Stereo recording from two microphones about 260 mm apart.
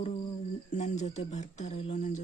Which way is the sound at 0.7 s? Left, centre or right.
Left.